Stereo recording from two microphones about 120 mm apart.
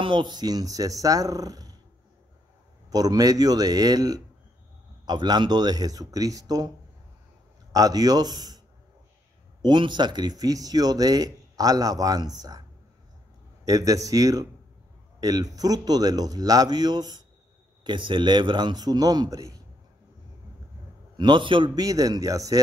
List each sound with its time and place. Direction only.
0.0 s speech: 40° right (ahead or behind)
2.9 s speech: 30° right (ahead or behind)
7.7 s speech: 30° right (ahead or behind)
9.6 s speech: 40° right (ahead or behind)
13.7 s speech: 30° right (ahead or behind)
21.2 s speech: 40° right (ahead or behind)